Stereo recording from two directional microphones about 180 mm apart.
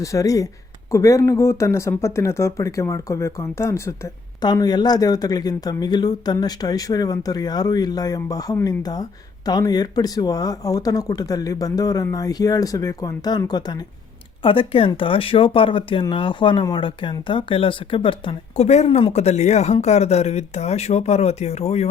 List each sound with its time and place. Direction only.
0.0 s speech: 20° left (ahead or behind); by 21.8 s 35° left (ahead or behind)